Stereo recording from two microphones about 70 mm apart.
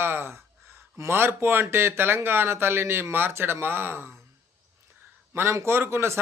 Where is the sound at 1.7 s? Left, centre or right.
Right.